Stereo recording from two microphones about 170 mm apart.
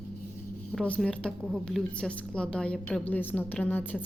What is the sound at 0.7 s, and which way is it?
A woman's voice, 5° left (ahead or behind).